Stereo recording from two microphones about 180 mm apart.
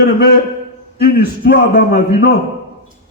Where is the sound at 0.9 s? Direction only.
60° left (ahead or behind).